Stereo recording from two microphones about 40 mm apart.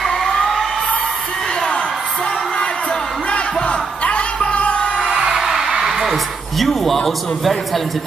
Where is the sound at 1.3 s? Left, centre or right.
Centre.